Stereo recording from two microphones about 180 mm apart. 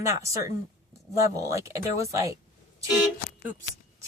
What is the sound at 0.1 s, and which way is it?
Speech, 15° right (ahead or behind).